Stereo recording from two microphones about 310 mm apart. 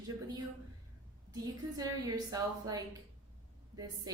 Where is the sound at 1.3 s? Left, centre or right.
Centre.